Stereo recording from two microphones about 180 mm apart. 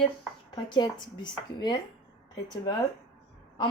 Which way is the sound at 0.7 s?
25° left (ahead or behind).